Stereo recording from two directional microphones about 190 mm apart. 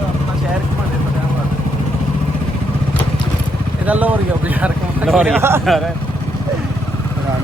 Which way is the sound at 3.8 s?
10° right (ahead or behind).